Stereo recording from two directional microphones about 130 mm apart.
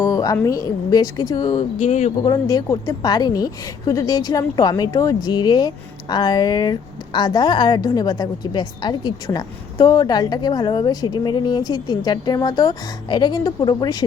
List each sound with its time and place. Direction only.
0.0 s a sound: 25° left (ahead or behind)
0.4 s a woman's voice: 30° left (ahead or behind)
1.5 s speech: 55° left (ahead or behind)
2.2 s a woman's voice: 30° left (ahead or behind)